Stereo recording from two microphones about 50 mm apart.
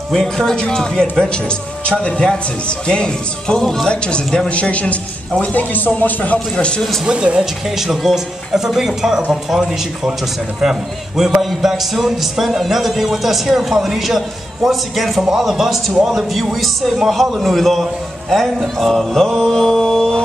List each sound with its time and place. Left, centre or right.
0.1 s a man's voice: centre; by 6.3 s left
7.1 s speech: right
7.6 s a man's voice: centre
18.8 s mantra: centre